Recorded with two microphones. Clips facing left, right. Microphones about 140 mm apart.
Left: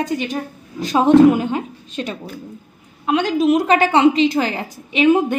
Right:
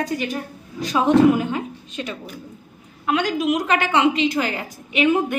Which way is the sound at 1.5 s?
30° left (ahead or behind).